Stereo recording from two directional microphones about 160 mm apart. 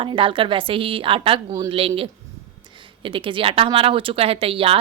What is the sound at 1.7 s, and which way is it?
A woman's voice, 35° right (ahead or behind).